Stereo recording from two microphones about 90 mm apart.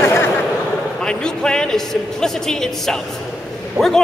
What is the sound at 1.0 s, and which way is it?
A man's voice, 10° left (ahead or behind).